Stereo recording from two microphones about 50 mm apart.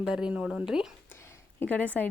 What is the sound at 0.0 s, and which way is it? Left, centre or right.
Speech, centre.